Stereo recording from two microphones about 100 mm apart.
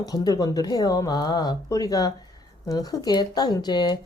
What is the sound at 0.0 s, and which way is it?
Speech, 40° left (ahead or behind).